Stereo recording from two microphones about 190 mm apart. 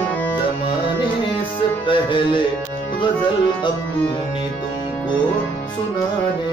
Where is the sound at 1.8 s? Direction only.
25° left (ahead or behind).